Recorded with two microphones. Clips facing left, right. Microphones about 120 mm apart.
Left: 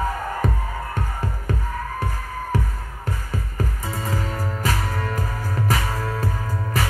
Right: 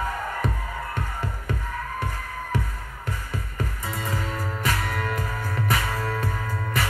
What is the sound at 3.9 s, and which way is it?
Music, 35° left (ahead or behind).